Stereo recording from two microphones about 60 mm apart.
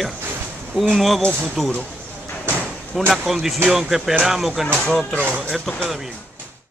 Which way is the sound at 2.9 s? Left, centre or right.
Centre.